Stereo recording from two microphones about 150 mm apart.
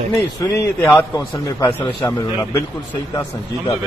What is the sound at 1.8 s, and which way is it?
Speech, 30° left (ahead or behind).